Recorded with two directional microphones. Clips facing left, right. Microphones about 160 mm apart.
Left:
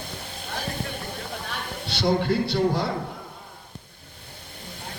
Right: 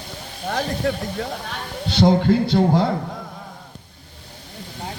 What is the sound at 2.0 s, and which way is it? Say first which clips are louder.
Speech: right 6 dB; 45° right (ahead or behind).